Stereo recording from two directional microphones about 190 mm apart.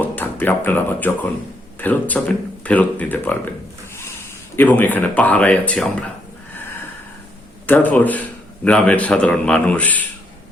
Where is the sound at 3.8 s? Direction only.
15° left (ahead or behind).